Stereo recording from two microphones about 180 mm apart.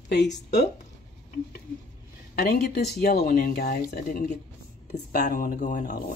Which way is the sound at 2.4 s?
60° left (ahead or behind).